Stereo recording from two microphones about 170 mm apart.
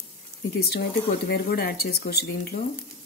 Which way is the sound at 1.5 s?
70° left (ahead or behind).